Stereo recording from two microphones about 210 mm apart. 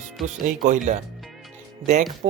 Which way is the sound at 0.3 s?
35° right (ahead or behind).